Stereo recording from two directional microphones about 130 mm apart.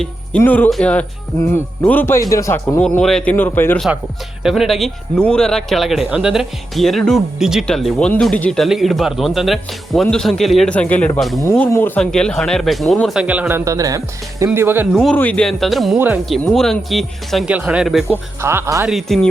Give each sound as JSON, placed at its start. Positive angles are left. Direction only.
{"t": 0.0, "sound": "speech", "side_deg": 10}
{"t": 3.0, "sound": "speech", "side_deg": 5}
{"t": 3.3, "sound": "speech", "side_deg": 15}
{"t": 4.4, "sound": "speech", "side_deg": 0}
{"t": 11.7, "sound": "speech", "side_deg": 15}
{"t": 12.1, "sound": "speech", "side_deg": 5}
{"t": 13.2, "sound": "speech", "side_deg": -10}
{"t": 13.7, "sound": "speech", "side_deg": -25}
{"t": 15.1, "sound": "speech", "side_deg": 10}
{"t": 17.5, "sound": "speech", "side_deg": -10}
{"t": 18.4, "sound": "speech", "side_deg": -20}
{"t": 18.9, "sound": "speech", "side_deg": 0}